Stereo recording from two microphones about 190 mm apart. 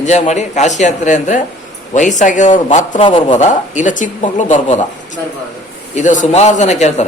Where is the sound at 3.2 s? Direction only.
40° left (ahead or behind).